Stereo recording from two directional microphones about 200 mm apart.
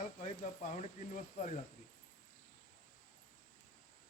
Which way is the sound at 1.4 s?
40° left (ahead or behind).